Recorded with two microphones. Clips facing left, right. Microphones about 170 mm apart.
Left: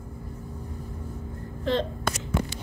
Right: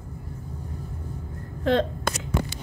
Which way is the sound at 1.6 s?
55° right (ahead or behind).